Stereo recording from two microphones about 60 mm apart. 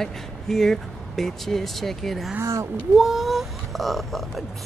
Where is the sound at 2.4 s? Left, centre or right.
Right.